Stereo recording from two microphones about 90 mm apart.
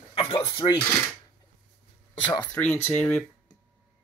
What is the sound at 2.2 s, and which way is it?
Speech, 55° left (ahead or behind).